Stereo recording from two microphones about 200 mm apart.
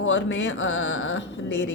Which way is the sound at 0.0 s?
65° left (ahead or behind).